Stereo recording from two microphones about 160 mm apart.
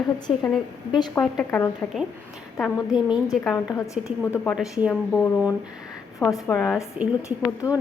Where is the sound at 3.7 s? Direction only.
20° left (ahead or behind).